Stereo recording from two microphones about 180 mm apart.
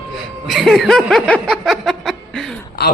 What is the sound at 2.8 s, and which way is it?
Speech, 65° left (ahead or behind).